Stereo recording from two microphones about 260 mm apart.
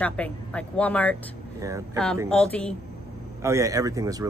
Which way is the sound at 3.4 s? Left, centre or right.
Centre.